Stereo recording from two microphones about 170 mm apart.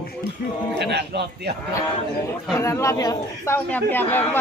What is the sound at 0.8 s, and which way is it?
Speech, 80° right.